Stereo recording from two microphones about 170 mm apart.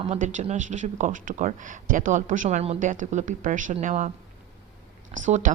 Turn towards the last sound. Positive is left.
turn(degrees=-45)  # may be behind; listen again after turning